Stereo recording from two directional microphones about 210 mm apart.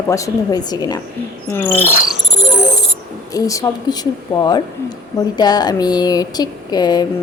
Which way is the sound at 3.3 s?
15° left (ahead or behind).